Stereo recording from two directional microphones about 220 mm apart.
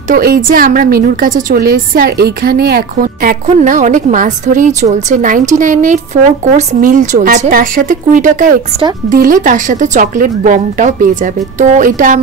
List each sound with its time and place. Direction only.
0.1 s a woman's voice: 45° right (ahead or behind)